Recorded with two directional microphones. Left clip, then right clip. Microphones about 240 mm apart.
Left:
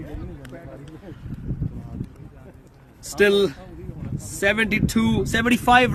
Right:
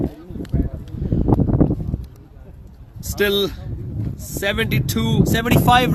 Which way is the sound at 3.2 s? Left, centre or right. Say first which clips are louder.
Left 1 dB; centre.